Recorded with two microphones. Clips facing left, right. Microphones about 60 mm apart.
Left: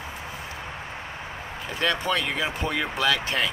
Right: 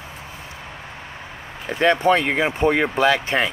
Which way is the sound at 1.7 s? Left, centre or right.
Right.